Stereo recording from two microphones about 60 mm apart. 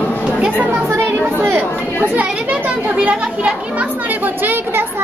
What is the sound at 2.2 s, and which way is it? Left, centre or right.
Children playing, right.